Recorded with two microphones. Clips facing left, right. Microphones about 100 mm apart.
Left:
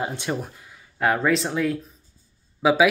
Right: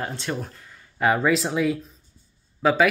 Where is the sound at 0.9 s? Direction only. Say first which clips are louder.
Right 1 dB; centre (ahead or behind).